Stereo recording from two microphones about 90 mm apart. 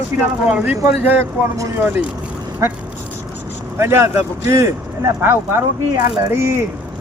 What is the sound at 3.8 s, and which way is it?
Speech, 30° right (ahead or behind).